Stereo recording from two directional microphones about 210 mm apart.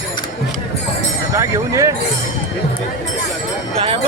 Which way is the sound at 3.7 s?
25° right (ahead or behind).